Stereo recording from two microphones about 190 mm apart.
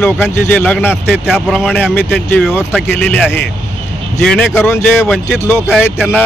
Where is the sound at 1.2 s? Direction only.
5° right (ahead or behind).